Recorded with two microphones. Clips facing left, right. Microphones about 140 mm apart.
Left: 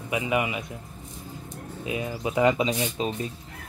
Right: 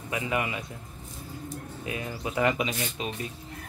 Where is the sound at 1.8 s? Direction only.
20° left (ahead or behind).